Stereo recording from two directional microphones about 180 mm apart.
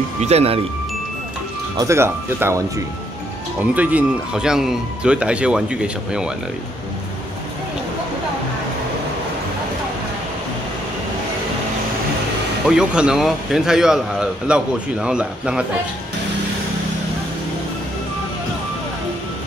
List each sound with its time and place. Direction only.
0.2 s speech: 35° right (ahead or behind)
1.8 s speech: 15° right (ahead or behind)
3.7 s speech: 10° right (ahead or behind)
12.6 s speech: 5° right (ahead or behind)